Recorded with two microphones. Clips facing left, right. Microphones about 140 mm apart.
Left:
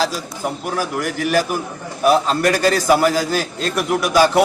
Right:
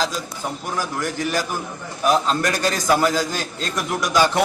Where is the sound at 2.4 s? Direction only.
40° left (ahead or behind).